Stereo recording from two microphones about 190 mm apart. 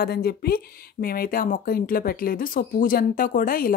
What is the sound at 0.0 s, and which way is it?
Speech, 55° left (ahead or behind).